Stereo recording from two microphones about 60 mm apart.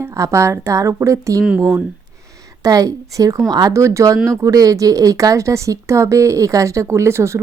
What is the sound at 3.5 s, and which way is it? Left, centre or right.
Speech, right.